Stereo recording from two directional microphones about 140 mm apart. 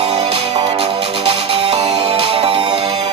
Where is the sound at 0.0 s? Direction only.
45° right (ahead or behind).